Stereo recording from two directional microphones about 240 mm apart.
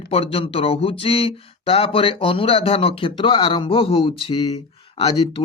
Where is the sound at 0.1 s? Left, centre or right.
Left.